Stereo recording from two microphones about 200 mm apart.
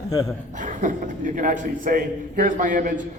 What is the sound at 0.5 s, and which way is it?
A man's voice, 40° right (ahead or behind).